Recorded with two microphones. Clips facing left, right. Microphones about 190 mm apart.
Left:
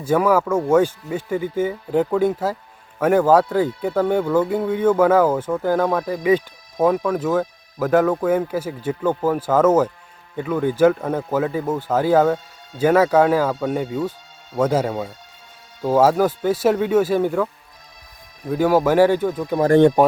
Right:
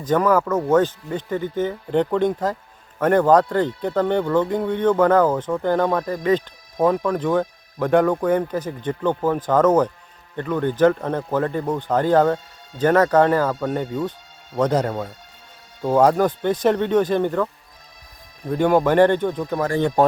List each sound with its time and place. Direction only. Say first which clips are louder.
0.0 s speech: left 1 dB; 10° left (ahead or behind)
20.0 s speech: left 1 dB; 15° left (ahead or behind)